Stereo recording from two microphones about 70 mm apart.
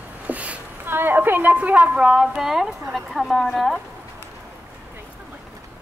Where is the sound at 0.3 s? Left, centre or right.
Centre.